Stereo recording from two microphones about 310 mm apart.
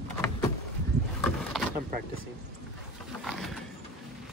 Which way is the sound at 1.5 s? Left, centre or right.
Centre.